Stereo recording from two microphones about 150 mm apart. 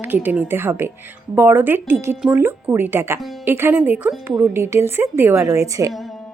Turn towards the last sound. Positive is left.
turn(degrees=-20)  # may be behind; listen again after turning